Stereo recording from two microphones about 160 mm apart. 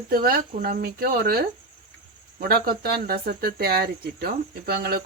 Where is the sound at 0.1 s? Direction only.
70° right (ahead or behind).